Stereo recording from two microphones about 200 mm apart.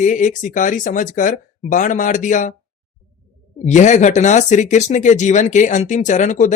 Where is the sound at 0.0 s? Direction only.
35° left (ahead or behind).